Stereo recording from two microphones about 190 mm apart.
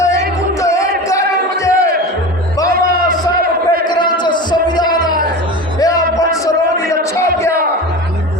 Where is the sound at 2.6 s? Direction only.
50° right (ahead or behind).